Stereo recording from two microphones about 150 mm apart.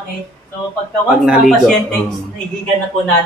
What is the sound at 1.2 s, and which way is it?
Speech, centre (ahead or behind).